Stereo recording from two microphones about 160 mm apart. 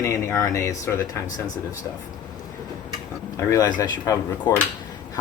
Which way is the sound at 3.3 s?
25° left (ahead or behind).